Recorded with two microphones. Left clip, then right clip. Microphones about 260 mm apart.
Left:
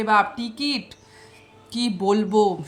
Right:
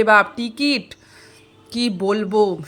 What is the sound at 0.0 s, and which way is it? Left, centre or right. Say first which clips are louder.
A woman's voice: right 5 dB; centre.